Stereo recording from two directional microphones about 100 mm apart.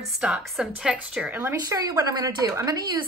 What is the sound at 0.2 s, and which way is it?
A woman's voice, 5° right (ahead or behind).